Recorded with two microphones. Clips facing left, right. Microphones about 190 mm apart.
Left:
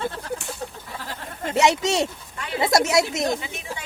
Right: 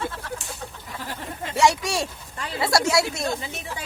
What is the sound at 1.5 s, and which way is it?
A woman's voice, 20° left (ahead or behind).